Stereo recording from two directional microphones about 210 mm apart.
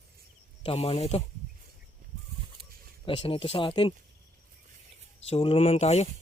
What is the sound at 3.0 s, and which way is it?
Speech, 25° left (ahead or behind).